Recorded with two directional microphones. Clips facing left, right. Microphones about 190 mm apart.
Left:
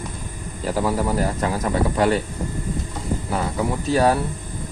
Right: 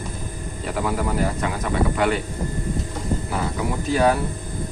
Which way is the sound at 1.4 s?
35° left (ahead or behind).